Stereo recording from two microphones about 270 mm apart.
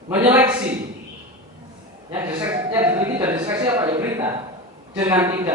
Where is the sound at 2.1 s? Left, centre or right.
Centre.